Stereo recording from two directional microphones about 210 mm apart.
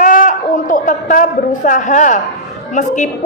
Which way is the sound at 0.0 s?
40° left (ahead or behind).